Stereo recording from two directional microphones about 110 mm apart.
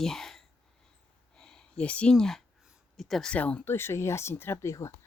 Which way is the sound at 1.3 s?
5° left (ahead or behind).